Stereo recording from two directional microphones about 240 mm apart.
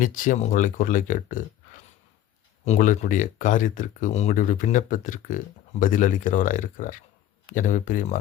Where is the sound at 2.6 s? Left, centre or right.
Left.